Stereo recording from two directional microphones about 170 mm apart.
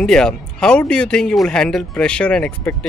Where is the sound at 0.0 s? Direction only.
5° left (ahead or behind).